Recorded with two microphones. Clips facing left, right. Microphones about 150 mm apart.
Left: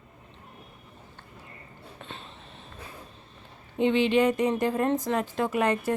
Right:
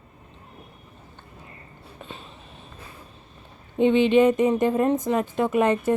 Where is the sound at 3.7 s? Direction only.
20° right (ahead or behind).